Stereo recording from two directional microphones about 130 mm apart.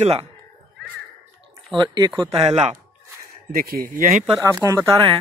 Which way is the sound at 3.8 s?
90° right.